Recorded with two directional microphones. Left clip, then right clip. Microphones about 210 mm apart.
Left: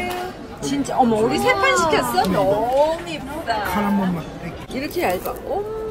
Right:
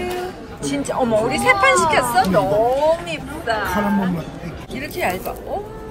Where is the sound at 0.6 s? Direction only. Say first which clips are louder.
Left 2 dB; 15° left (ahead or behind).